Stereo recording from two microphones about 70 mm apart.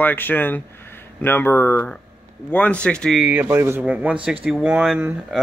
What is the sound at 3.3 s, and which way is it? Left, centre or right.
Speech, right.